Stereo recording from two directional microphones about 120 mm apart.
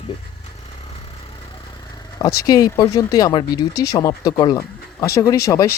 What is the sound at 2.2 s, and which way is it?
Speech, 30° left (ahead or behind).